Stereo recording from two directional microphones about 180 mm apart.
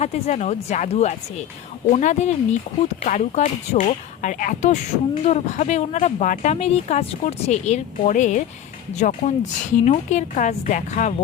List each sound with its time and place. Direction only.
0.0 s a woman's voice: 40° left (ahead or behind)